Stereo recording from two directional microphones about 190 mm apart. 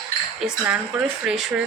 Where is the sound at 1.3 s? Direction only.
5° right (ahead or behind).